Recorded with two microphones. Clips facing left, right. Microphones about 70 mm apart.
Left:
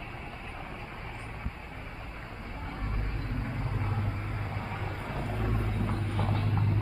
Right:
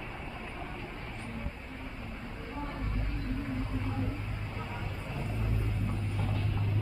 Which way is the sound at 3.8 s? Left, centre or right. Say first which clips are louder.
Even; left.